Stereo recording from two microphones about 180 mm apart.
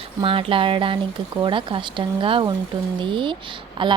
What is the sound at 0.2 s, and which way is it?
Speech, 30° right (ahead or behind).